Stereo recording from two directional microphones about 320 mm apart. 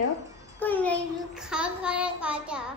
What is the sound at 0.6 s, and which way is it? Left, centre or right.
Child singing, centre.